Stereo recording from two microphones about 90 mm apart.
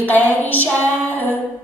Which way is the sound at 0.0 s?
20° left (ahead or behind).